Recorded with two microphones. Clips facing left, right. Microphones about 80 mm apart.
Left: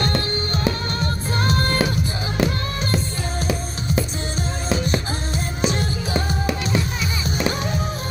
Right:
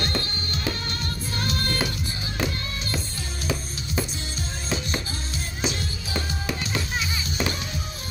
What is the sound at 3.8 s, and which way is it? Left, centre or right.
Music, left.